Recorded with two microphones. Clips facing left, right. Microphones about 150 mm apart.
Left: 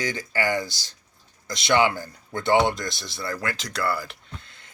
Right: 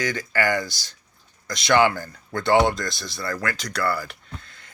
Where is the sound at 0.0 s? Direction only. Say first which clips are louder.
Right 2 dB; 25° left (ahead or behind).